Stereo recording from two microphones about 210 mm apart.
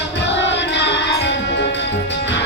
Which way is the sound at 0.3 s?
55° left (ahead or behind).